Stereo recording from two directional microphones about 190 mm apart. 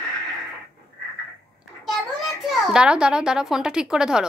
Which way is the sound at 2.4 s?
5° right (ahead or behind).